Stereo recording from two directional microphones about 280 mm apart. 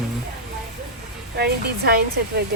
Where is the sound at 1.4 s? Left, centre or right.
Right.